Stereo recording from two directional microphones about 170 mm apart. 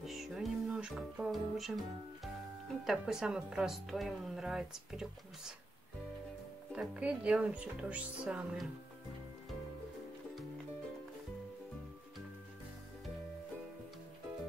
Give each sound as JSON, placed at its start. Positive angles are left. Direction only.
{"t": 0.0, "sound": "music", "side_deg": 0}
{"t": 2.8, "sound": "a woman's voice", "side_deg": -5}
{"t": 6.7, "sound": "speech", "side_deg": -5}